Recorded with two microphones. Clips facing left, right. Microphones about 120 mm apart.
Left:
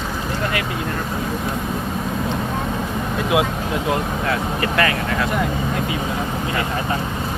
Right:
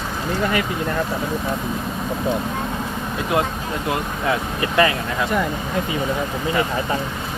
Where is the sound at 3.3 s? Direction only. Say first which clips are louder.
Left 2 dB; 5° left (ahead or behind).